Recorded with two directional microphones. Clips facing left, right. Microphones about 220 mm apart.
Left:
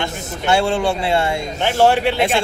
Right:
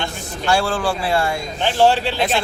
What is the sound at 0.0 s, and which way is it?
Speech, 25° left (ahead or behind).